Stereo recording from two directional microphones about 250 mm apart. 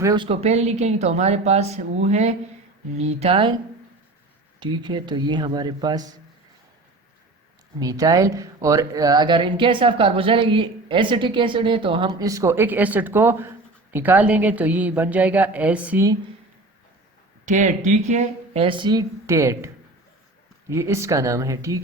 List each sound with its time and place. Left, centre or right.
0.0 s speech: centre
4.6 s speech: centre
7.8 s speech: centre
17.4 s speech: right; by 21.8 s centre